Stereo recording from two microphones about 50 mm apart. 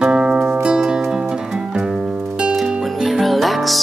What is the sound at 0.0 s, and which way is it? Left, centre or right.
Music, centre.